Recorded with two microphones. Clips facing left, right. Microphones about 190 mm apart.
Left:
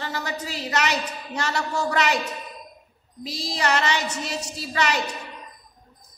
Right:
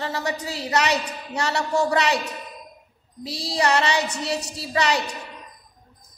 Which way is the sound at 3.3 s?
30° right (ahead or behind).